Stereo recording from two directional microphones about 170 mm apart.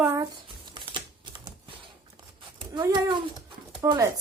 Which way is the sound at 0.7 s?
30° right (ahead or behind).